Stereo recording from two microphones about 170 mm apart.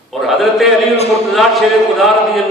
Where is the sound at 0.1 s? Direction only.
Centre (ahead or behind).